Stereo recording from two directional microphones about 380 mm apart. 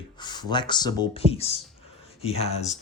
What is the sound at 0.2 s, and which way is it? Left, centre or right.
Speech, centre.